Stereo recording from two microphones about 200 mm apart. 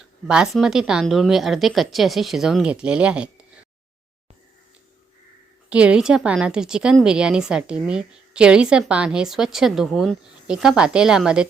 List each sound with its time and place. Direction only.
0.0 s a woman's voice: 5° right (ahead or behind)
5.6 s a woman's voice: 5° right (ahead or behind)